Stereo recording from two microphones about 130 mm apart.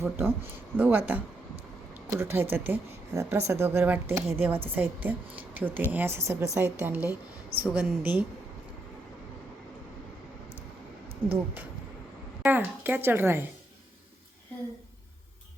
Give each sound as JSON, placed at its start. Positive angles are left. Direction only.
{"t": 0.0, "sound": "speech", "side_deg": -15}
{"t": 11.3, "sound": "speech", "side_deg": -15}